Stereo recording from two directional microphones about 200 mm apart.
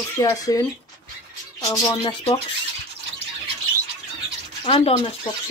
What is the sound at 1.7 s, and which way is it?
Speech, 25° left (ahead or behind).